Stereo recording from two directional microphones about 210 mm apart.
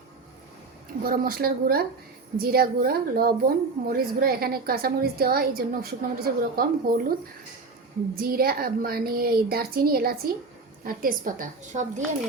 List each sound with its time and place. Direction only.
1.0 s a woman's voice: 45° right (ahead or behind)
8.1 s a woman's voice: 45° right (ahead or behind)